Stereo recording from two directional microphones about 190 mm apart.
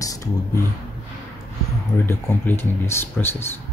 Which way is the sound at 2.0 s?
10° left (ahead or behind).